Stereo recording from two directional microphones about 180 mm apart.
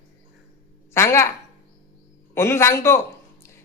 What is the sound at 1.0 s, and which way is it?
Speech, 15° left (ahead or behind).